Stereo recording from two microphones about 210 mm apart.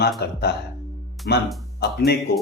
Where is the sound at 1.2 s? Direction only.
Centre (ahead or behind).